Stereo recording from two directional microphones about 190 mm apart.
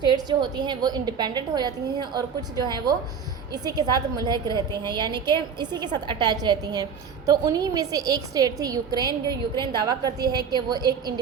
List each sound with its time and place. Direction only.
0.0 s a woman's voice: 25° right (ahead or behind)